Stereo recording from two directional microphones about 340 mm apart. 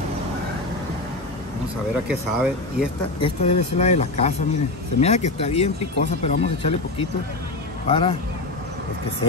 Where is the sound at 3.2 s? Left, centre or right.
Centre.